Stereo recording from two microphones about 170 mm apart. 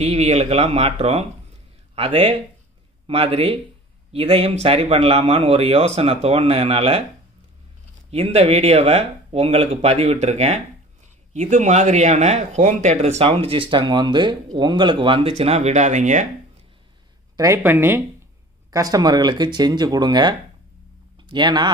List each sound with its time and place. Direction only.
0.0 s speech: 40° right (ahead or behind)
8.1 s speech: 40° right (ahead or behind)
17.4 s speech: 15° right (ahead or behind)